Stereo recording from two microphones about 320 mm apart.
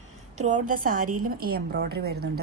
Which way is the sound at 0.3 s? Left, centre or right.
Right.